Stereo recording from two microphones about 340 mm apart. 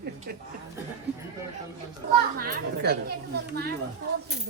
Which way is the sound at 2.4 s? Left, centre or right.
Right.